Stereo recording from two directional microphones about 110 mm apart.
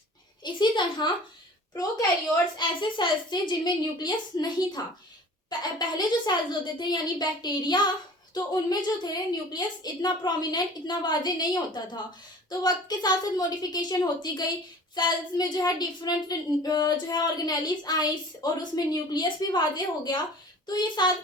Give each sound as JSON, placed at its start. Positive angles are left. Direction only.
{"t": 0.4, "sound": "a child's voice", "side_deg": 45}